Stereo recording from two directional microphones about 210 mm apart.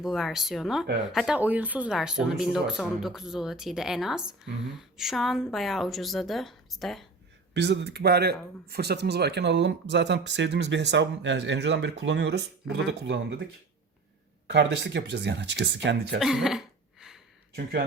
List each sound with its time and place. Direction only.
0.0 s speech: centre (ahead or behind)
7.5 s speech: 55° right (ahead or behind)
14.4 s speech: 55° right (ahead or behind)
16.2 s cough: centre (ahead or behind)
17.5 s speech: 45° right (ahead or behind)